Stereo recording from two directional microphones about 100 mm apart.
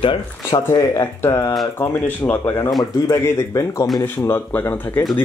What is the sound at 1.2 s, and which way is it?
Speech, 25° left (ahead or behind).